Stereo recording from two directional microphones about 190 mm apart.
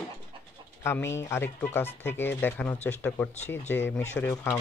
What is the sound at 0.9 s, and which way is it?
Speech, 15° left (ahead or behind).